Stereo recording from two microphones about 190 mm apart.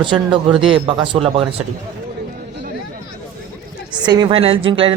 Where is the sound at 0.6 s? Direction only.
25° right (ahead or behind).